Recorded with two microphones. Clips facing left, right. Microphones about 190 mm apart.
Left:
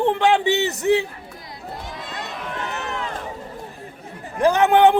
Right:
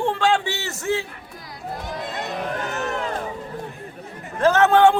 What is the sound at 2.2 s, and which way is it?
Run, 45° right (ahead or behind).